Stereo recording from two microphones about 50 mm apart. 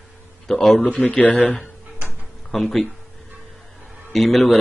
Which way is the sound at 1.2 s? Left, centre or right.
Left.